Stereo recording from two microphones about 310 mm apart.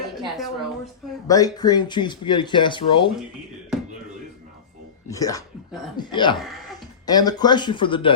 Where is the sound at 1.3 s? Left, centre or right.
Centre.